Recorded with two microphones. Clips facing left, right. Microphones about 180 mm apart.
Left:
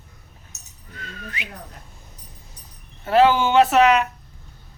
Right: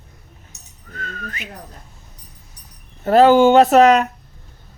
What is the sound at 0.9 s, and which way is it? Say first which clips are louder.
Whistling: right 4 dB; 45° right (ahead or behind).